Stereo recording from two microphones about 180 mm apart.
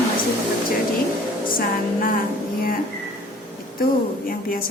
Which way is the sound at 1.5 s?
50° left (ahead or behind).